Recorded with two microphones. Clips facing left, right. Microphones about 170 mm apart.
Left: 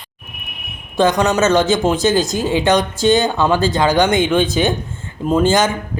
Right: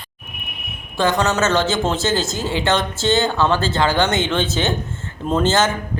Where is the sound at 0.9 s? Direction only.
20° left (ahead or behind).